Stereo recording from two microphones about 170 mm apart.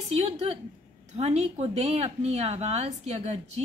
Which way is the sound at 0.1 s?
35° right (ahead or behind).